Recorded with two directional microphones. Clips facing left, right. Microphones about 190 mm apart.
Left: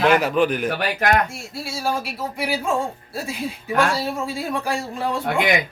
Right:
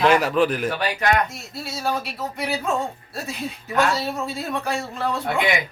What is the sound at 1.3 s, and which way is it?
Speech, 10° left (ahead or behind).